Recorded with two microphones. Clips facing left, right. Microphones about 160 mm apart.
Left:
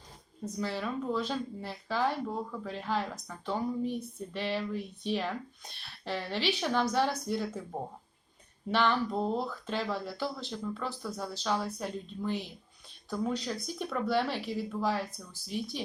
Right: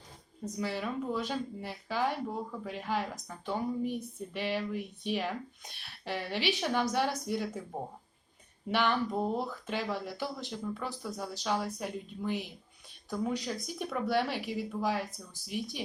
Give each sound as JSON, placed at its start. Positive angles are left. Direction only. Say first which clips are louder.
{"t": 0.6, "sound": "speech", "louder": "even", "side_deg": -15}
{"t": 8.7, "sound": "speech", "louder": "left 1 dB", "side_deg": -15}
{"t": 15.0, "sound": "speech", "louder": "left 1 dB", "side_deg": -40}